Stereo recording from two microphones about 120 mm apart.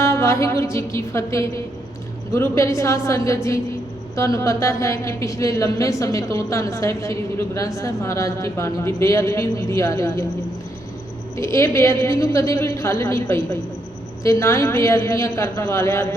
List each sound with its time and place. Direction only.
0.0 s a woman's voice: 25° left (ahead or behind)
11.3 s a woman's voice: 25° left (ahead or behind)